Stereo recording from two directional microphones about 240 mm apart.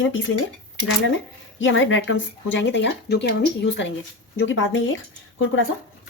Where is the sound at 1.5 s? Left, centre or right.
Left.